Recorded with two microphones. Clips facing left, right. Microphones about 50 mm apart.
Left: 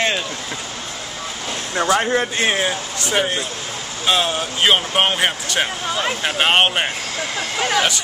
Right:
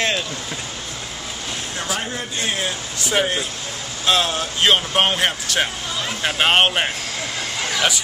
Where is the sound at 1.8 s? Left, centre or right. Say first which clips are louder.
Left 11 dB; left.